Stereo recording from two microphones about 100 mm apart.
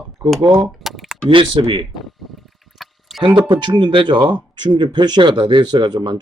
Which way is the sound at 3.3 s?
50° right (ahead or behind).